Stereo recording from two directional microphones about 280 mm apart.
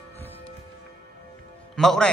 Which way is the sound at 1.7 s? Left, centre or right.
Centre.